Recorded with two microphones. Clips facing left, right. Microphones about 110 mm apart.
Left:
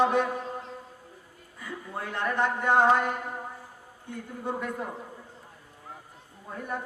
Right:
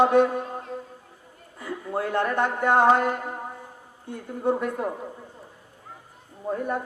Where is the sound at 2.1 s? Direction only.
50° right (ahead or behind).